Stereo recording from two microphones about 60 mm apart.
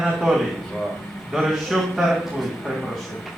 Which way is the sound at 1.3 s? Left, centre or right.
Centre.